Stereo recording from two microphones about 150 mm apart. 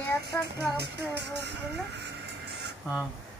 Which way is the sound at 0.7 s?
90° right.